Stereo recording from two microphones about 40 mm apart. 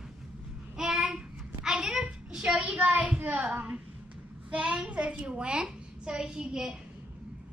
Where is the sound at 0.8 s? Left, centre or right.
Centre.